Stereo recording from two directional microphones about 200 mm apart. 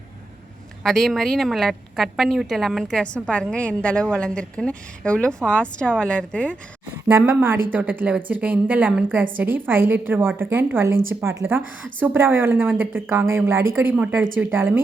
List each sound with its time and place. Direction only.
0.9 s a woman's voice: centre (ahead or behind)
7.1 s a woman's voice: 10° right (ahead or behind)